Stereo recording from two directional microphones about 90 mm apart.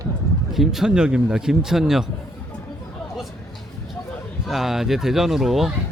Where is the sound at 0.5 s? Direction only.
5° right (ahead or behind).